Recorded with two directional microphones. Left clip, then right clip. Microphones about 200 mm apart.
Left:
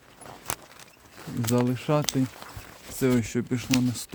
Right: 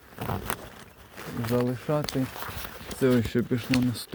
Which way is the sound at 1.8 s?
40° left (ahead or behind).